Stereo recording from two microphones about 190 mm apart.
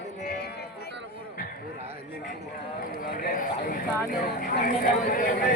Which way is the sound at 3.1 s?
50° left (ahead or behind).